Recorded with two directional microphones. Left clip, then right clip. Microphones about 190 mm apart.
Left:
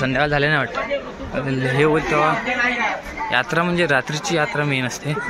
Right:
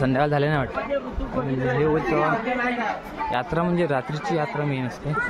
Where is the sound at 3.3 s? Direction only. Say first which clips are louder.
Left 6 dB; 5° right (ahead or behind).